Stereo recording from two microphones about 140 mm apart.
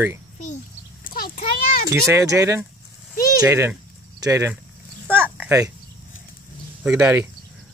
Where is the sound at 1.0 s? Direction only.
90° left.